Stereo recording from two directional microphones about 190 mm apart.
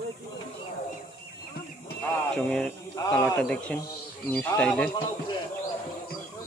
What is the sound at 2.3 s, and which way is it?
Speech, 5° left (ahead or behind).